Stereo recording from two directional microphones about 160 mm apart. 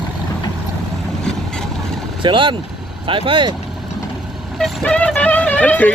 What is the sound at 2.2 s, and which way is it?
Speech, 30° right (ahead or behind).